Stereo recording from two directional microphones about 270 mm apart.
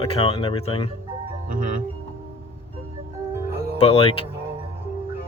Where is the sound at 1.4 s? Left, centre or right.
Right.